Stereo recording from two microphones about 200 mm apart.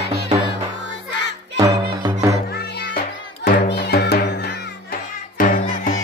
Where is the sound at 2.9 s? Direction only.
45° left (ahead or behind).